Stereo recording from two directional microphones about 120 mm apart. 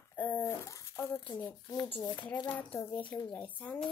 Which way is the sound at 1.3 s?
40° left (ahead or behind).